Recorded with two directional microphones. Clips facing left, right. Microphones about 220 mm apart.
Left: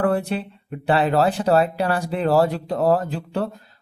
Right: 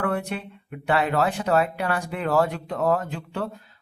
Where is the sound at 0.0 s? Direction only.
30° left (ahead or behind).